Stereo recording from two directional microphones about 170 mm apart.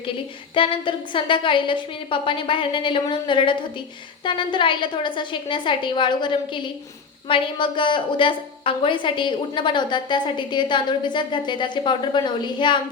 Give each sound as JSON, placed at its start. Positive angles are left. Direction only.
{"t": 0.5, "sound": "a woman's voice", "side_deg": 30}